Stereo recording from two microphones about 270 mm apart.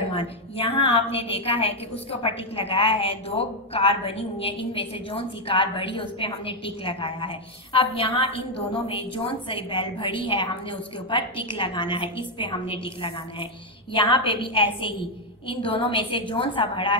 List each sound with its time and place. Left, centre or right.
0.1 s a woman's voice: left